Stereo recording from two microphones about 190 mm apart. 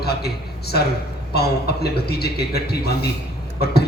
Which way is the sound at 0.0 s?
55° left (ahead or behind).